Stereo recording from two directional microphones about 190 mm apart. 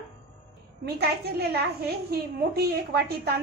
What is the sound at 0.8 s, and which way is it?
A woman's voice, 55° right (ahead or behind).